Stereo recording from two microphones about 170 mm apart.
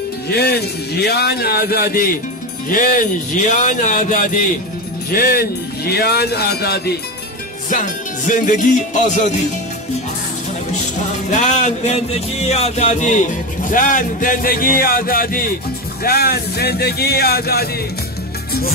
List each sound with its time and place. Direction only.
0.3 s a man's voice: 70° left (ahead or behind); by 4.5 s 50° left (ahead or behind)
5.1 s speech: 60° left (ahead or behind)
7.7 s a man's voice: 50° left (ahead or behind)
11.2 s music: 45° left (ahead or behind)
13.7 s a man's voice: 50° left (ahead or behind); by 17.6 s 65° left (ahead or behind)